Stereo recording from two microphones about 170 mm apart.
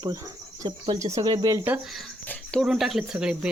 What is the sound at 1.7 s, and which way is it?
Speech, centre (ahead or behind).